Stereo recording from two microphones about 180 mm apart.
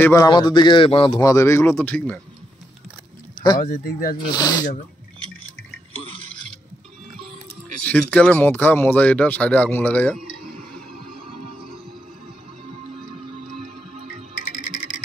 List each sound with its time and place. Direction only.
0.0 s a man's voice: 20° left (ahead or behind)
3.5 s speech: 55° left (ahead or behind)
4.3 s a man's voice: 20° left (ahead or behind)
7.8 s speech: 10° left (ahead or behind)
11.0 s music: 55° right (ahead or behind)